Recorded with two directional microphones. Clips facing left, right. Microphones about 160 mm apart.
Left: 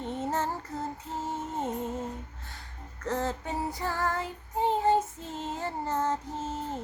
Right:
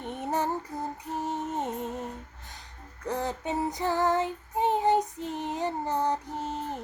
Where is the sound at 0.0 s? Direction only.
15° right (ahead or behind).